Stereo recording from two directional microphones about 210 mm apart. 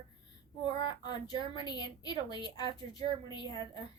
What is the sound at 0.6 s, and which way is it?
A woman's voice, 20° left (ahead or behind).